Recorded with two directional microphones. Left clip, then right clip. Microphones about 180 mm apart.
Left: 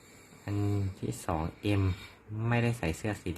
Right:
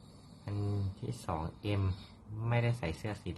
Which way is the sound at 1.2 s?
30° left (ahead or behind).